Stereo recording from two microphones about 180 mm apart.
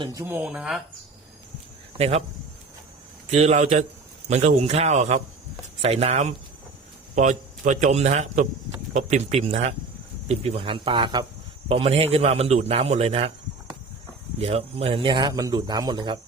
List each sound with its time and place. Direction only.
0.0 s speech: 20° right (ahead or behind)
2.0 s a man's voice: 35° right (ahead or behind)
3.3 s a man's voice: 40° right (ahead or behind)
14.3 s a man's voice: 35° right (ahead or behind)